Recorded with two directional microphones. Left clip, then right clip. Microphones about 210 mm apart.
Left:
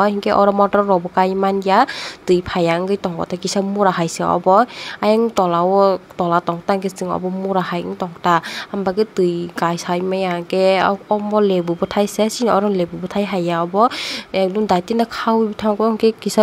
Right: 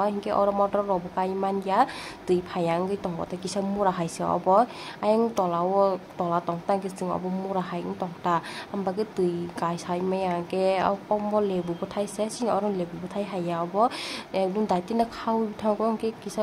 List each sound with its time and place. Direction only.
0.0 s speech: 25° left (ahead or behind)